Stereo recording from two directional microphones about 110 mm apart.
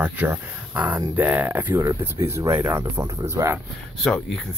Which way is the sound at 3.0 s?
35° right (ahead or behind).